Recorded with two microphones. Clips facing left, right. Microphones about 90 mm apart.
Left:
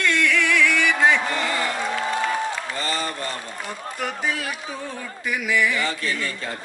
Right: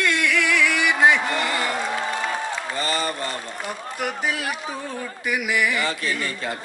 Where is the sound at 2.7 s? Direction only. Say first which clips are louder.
Right 2 dB; 15° right (ahead or behind).